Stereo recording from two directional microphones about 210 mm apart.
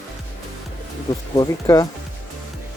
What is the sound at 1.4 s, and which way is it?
Speech, 15° left (ahead or behind).